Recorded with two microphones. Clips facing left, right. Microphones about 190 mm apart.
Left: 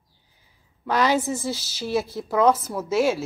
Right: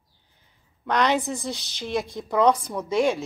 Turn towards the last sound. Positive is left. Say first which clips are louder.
# left 1 dB
turn(degrees=5)  # may be behind; listen again after turning